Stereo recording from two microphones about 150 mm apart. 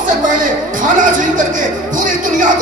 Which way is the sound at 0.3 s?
60° right (ahead or behind).